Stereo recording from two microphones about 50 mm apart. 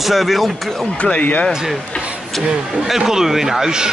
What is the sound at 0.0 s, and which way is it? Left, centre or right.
Speech, centre.